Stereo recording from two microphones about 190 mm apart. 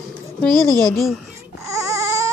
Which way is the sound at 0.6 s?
20° right (ahead or behind).